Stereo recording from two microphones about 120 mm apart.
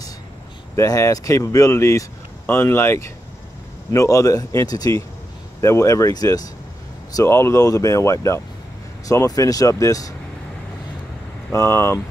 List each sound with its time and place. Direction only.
0.7 s speech: 25° left (ahead or behind)
11.5 s speech: 20° left (ahead or behind)